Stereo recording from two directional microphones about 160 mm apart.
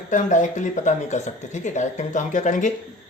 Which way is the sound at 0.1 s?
50° left (ahead or behind).